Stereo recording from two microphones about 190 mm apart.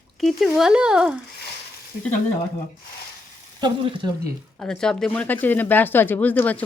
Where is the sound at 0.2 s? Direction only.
Centre (ahead or behind).